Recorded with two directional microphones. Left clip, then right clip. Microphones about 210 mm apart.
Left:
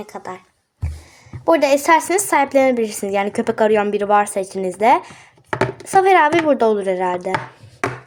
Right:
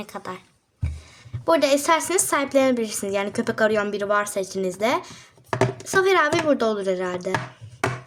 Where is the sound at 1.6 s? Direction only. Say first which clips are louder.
Left 5 dB; centre (ahead or behind).